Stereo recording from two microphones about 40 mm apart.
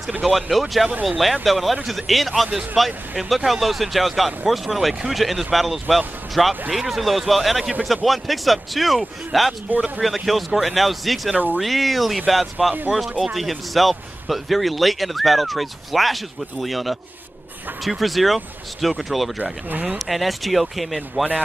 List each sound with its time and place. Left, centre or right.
0.2 s speech: centre
9.7 s speech: right
10.0 s speech: centre